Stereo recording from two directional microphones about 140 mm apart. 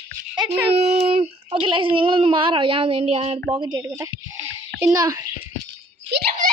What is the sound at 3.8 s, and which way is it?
A child's voice, 20° right (ahead or behind).